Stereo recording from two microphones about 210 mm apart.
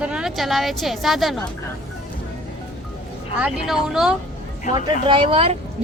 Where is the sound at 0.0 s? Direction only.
5° right (ahead or behind).